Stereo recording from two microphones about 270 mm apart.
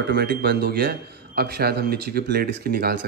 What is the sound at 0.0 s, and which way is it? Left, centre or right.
Speech, right.